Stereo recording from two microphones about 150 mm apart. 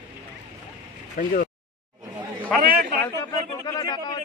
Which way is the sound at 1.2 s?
70° left (ahead or behind).